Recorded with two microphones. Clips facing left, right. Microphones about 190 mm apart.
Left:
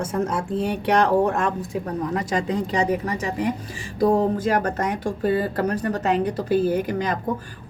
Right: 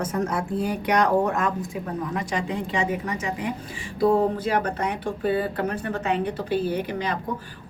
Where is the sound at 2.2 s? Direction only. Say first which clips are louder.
Left 4 dB; 40° left (ahead or behind).